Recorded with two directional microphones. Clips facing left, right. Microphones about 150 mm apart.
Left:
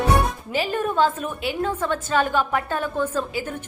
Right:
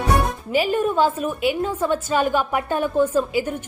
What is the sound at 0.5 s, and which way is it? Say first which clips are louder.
A woman's voice: right 4 dB; 15° right (ahead or behind).